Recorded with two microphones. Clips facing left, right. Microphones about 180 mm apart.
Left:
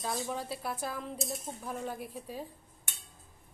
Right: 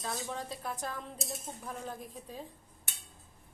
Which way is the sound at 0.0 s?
10° left (ahead or behind).